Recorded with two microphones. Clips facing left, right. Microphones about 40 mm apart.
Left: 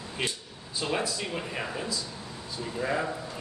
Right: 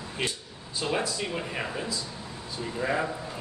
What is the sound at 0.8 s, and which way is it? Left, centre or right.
A man's voice, centre.